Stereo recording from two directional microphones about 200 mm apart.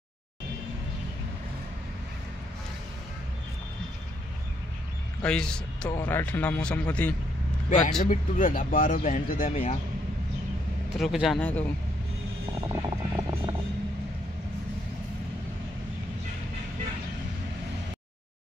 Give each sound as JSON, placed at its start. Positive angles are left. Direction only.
{"t": 5.2, "sound": "a man's voice", "side_deg": 5}
{"t": 8.0, "sound": "speech", "side_deg": 45}
{"t": 11.0, "sound": "speech", "side_deg": 0}
{"t": 12.5, "sound": "vehicle", "side_deg": -20}